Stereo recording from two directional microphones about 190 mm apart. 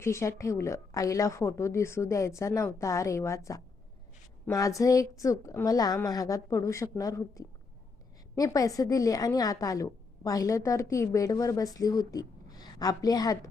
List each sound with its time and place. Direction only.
0.0 s a woman's voice: 15° left (ahead or behind)